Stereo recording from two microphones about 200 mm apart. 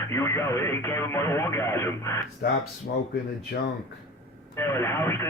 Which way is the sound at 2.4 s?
50° left (ahead or behind).